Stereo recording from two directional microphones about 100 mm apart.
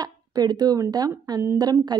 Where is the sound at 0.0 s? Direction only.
40° right (ahead or behind).